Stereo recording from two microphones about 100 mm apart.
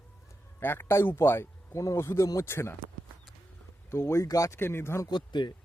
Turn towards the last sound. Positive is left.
turn(degrees=50)  # may be behind; listen again after turning